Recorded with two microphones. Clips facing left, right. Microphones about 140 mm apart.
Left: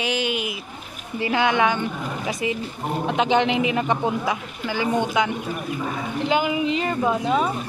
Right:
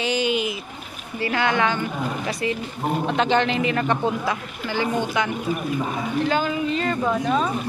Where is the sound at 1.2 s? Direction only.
15° left (ahead or behind).